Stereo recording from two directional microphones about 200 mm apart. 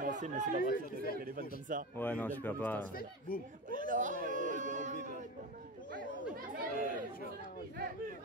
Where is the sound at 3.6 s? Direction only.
40° right (ahead or behind).